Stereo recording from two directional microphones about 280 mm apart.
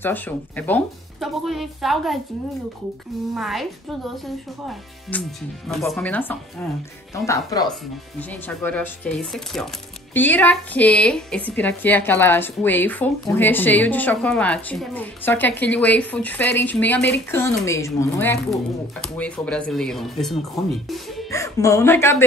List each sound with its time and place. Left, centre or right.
0.0 s speech: centre
3.3 s speech: centre
5.1 s a woman's voice: centre